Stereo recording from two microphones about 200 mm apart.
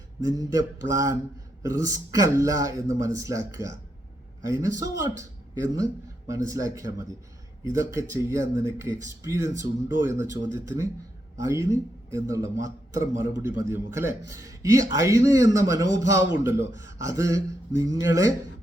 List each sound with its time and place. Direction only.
0.2 s a man's voice: 15° right (ahead or behind)